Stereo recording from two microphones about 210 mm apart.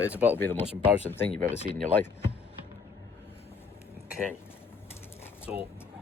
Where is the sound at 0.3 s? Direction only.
10° left (ahead or behind).